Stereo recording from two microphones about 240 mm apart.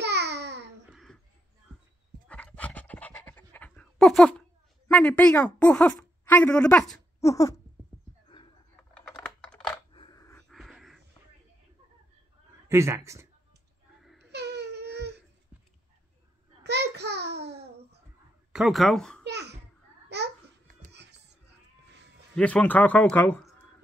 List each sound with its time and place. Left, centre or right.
0.0 s babbling: right
2.2 s pant: centre
4.8 s a woman's voice: centre
7.2 s dog: centre
9.0 s computer keyboard: centre
9.9 s a sound: centre
10.5 s a sound: centre
12.6 s speech: centre
14.3 s baby cry: right
16.6 s a sound: right
18.5 s speech: centre
19.2 s a sound: right
20.9 s music: right
22.3 s a man's voice: centre